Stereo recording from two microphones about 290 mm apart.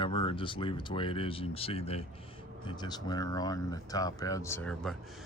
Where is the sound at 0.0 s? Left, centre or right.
Centre.